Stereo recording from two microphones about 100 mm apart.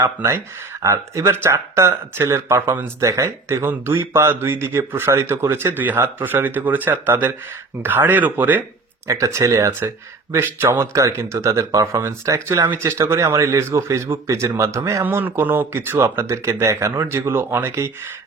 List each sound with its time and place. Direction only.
0.0 s speech: 25° right (ahead or behind)
9.0 s speech: 30° right (ahead or behind)
15.0 s speech: 20° right (ahead or behind)